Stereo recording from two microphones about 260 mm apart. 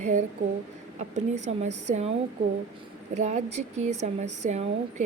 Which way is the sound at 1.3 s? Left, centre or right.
Right.